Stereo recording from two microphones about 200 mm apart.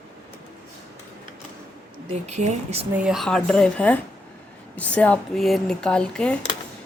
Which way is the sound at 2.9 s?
5° right (ahead or behind).